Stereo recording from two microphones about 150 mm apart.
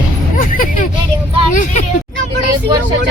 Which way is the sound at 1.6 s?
55° left (ahead or behind).